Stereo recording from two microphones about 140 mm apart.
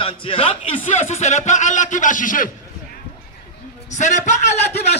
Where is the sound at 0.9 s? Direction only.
55° left (ahead or behind); by 2.5 s 70° left (ahead or behind).